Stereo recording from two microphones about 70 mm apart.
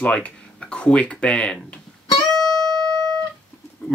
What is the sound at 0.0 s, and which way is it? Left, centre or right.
Speech, centre.